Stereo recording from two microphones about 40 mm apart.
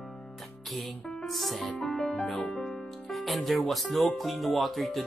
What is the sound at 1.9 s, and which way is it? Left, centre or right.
Music, left.